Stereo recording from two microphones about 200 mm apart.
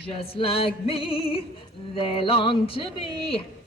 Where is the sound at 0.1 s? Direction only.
30° left (ahead or behind).